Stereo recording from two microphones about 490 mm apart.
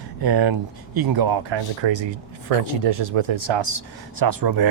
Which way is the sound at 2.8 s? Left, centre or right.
Right.